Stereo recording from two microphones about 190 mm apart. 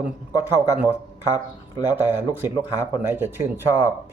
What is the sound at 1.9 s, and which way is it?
Speech, 10° right (ahead or behind).